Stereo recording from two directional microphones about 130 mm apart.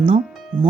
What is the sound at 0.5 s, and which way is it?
Speech, 35° right (ahead or behind).